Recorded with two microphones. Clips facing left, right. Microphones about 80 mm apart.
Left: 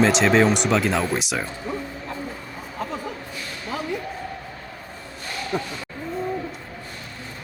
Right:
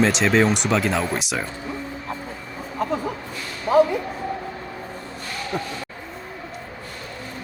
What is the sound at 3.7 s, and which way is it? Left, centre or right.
Speech, right.